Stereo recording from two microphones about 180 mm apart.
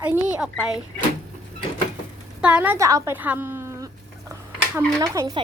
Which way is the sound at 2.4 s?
10° right (ahead or behind).